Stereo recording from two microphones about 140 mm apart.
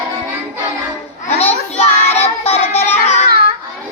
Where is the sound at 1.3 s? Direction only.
50° left (ahead or behind).